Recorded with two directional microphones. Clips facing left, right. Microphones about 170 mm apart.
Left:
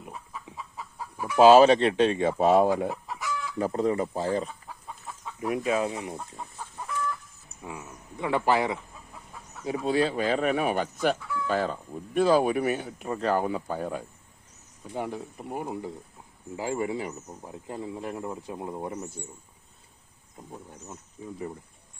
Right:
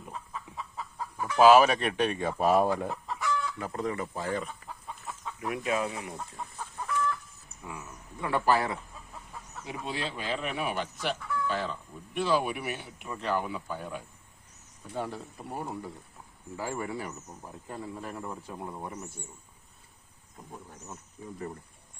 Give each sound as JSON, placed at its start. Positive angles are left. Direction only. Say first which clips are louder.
{"t": 0.0, "sound": "chicken", "louder": "even", "side_deg": 15}
{"t": 1.4, "sound": "speech", "louder": "left 4 dB", "side_deg": 25}
{"t": 3.1, "sound": "chicken", "louder": "right 2 dB", "side_deg": 5}
{"t": 3.6, "sound": "speech", "louder": "left 7 dB", "side_deg": 30}
{"t": 5.2, "sound": "chicken", "louder": "left 5 dB", "side_deg": 20}
{"t": 5.5, "sound": "speech", "louder": "left 4 dB", "side_deg": 30}
{"t": 8.2, "sound": "speech", "louder": "left 2 dB", "side_deg": 20}
{"t": 9.6, "sound": "speech", "louder": "left 11 dB", "side_deg": 40}
{"t": 14.9, "sound": "speech", "louder": "left 3 dB", "side_deg": 15}
{"t": 21.2, "sound": "speech", "louder": "left 4 dB", "side_deg": 25}